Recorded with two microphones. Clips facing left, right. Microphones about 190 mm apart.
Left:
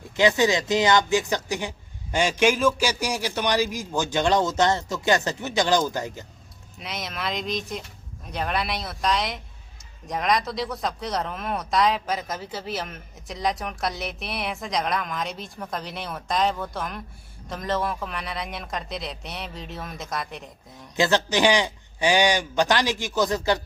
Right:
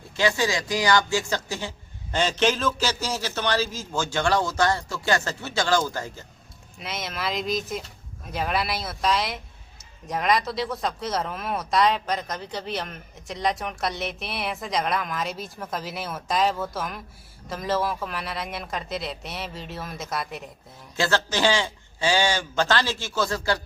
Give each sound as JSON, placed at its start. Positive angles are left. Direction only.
{"t": 0.2, "sound": "a man's voice", "side_deg": 20}
{"t": 6.7, "sound": "speech", "side_deg": 0}
{"t": 20.9, "sound": "a man's voice", "side_deg": 20}